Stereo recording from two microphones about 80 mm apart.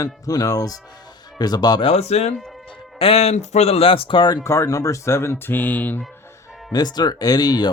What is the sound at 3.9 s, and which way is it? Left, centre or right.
Speech, left.